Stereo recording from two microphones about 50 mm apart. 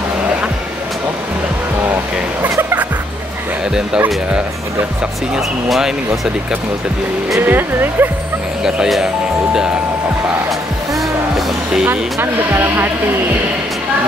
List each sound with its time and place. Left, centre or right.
5.7 s speech: centre
7.3 s speech: right
8.6 s speech: centre
11.9 s speech: right